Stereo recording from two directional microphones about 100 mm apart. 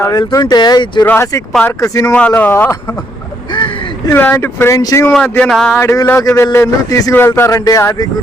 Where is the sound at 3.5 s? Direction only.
55° left (ahead or behind).